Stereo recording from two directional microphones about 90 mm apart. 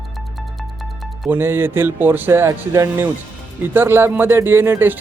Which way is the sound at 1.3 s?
25° right (ahead or behind).